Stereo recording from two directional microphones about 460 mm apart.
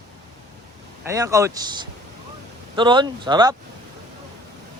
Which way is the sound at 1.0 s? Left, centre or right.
Centre.